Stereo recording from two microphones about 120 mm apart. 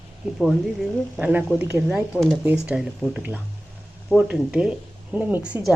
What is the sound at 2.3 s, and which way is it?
Speech, 10° right (ahead or behind).